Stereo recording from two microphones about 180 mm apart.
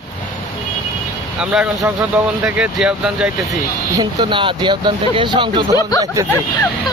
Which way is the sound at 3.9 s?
25° right (ahead or behind).